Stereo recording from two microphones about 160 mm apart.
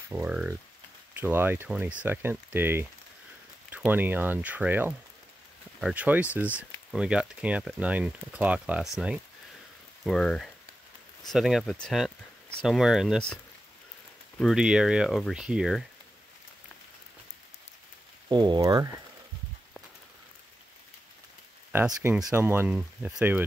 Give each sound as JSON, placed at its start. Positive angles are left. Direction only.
{"t": 0.1, "sound": "speech", "side_deg": -10}
{"t": 14.4, "sound": "speech", "side_deg": -5}
{"t": 18.3, "sound": "speech", "side_deg": -25}
{"t": 22.3, "sound": "speech", "side_deg": -15}